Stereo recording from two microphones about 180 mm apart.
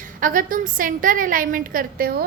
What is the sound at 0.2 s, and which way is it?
A woman's voice, 50° right (ahead or behind).